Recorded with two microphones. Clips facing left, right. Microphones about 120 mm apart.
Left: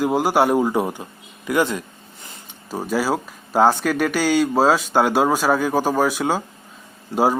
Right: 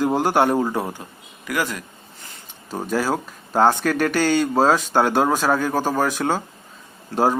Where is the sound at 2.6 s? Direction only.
10° left (ahead or behind).